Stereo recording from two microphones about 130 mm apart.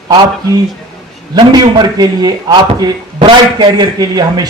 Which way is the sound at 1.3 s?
30° right (ahead or behind).